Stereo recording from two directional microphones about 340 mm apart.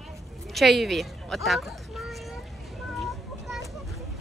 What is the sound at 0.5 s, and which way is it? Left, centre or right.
Speech, centre.